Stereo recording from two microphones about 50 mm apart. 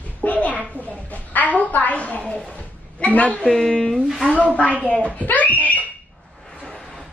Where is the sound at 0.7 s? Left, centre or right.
Left.